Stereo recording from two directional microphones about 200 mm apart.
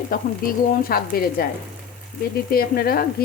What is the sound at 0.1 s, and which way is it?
Frying, 45° left (ahead or behind).